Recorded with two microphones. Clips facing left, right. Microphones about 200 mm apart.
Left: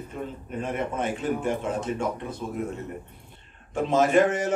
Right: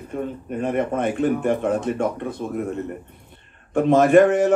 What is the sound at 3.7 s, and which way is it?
Speech, 55° right (ahead or behind).